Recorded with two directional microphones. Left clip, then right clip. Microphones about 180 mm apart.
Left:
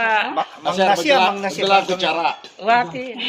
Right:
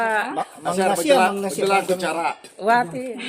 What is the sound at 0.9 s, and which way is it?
Speech, 90° right.